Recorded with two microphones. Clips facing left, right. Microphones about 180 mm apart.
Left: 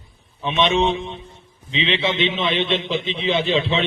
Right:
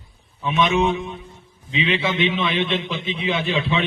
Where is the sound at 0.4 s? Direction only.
25° left (ahead or behind).